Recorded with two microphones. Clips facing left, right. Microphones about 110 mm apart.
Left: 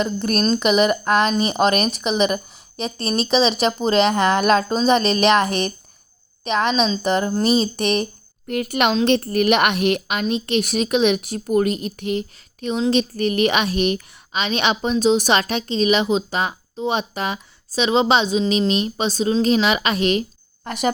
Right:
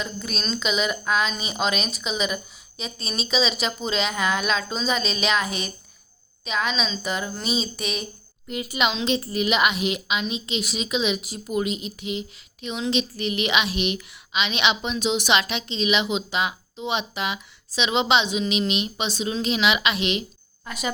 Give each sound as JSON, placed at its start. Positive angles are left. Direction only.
{"t": 0.0, "sound": "speech", "side_deg": 55}
{"t": 12.6, "sound": "a woman's voice", "side_deg": 40}